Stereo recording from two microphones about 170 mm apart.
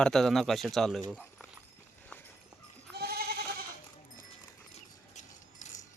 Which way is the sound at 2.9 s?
65° right (ahead or behind).